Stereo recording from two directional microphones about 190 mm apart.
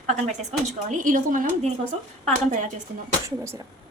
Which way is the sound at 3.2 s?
15° right (ahead or behind).